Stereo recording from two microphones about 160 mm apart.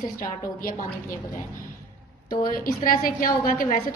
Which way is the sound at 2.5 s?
60° left (ahead or behind).